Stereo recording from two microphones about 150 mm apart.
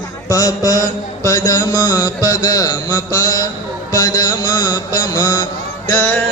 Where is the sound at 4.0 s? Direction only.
25° left (ahead or behind).